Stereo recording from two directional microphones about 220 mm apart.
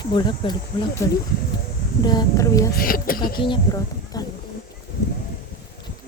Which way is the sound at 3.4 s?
20° left (ahead or behind).